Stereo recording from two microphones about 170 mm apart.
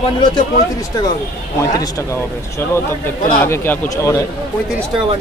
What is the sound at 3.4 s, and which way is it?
Speech, 15° left (ahead or behind).